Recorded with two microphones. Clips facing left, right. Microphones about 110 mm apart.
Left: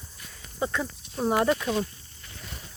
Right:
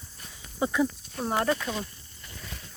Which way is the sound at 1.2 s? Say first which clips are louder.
Left 3 dB; 5° left (ahead or behind).